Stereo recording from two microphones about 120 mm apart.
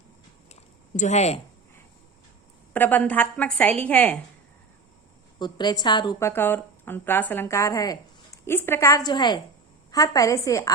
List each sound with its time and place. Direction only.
0.9 s speech: 75° left (ahead or behind)
2.7 s a woman's voice: 15° left (ahead or behind)
5.4 s a woman's voice: 35° left (ahead or behind)
6.1 s speech: 20° left (ahead or behind)
8.4 s speech: 20° left (ahead or behind)